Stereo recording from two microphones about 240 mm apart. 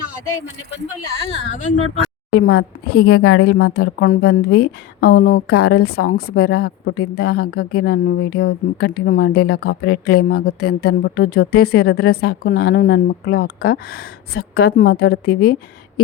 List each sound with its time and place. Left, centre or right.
2.3 s speech: left
3.1 s a woman's voice: left
3.4 s speech: left